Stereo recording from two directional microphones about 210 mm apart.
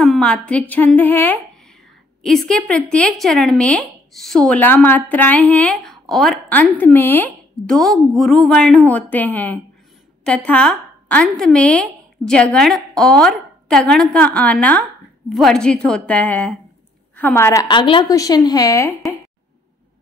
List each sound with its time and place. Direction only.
0.0 s a woman's voice: centre (ahead or behind)